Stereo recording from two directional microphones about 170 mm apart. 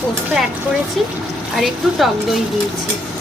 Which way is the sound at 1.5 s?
Centre (ahead or behind).